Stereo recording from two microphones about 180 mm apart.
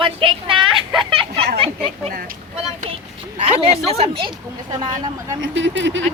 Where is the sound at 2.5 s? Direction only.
35° right (ahead or behind).